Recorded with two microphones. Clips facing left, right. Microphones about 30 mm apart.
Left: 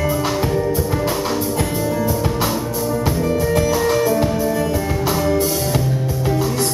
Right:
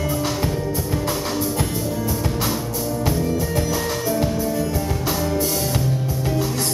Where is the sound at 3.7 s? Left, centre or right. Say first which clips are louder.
Left 6 dB; centre.